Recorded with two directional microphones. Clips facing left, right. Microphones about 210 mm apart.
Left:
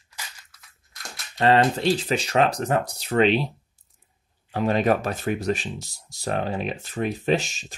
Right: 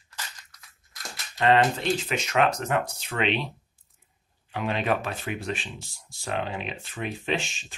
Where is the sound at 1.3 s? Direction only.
35° left (ahead or behind).